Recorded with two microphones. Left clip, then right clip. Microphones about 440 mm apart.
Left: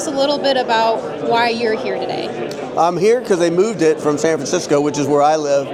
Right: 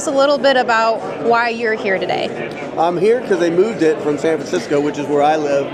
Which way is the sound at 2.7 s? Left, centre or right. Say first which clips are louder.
Left 1 dB; left.